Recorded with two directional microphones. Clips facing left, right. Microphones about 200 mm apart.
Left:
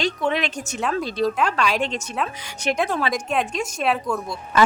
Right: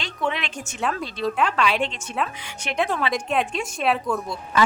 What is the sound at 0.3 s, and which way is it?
A woman's voice, 40° left (ahead or behind).